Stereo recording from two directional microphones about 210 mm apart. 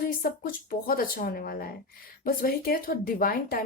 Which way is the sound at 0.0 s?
45° left (ahead or behind).